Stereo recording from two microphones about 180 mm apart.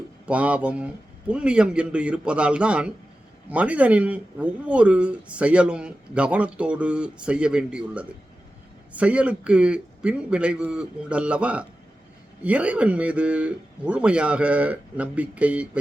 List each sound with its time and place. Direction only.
0.3 s a man's voice: 10° right (ahead or behind)